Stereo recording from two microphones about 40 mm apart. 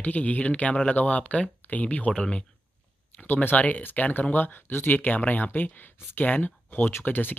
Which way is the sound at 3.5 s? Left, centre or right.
Left.